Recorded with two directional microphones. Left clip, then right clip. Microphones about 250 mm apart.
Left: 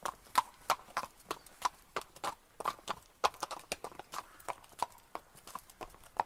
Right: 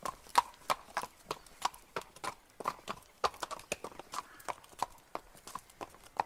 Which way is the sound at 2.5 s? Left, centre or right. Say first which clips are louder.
Even; left.